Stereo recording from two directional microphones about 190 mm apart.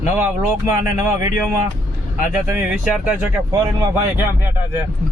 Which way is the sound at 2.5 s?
10° right (ahead or behind).